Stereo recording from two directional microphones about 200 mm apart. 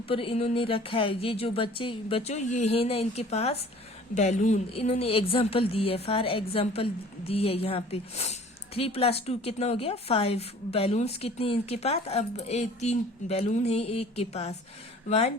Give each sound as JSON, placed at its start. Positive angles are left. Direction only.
{"t": 0.1, "sound": "a woman's voice", "side_deg": 30}